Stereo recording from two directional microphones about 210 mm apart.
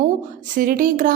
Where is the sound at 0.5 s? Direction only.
40° right (ahead or behind).